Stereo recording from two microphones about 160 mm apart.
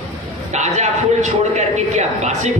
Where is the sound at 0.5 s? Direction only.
45° right (ahead or behind).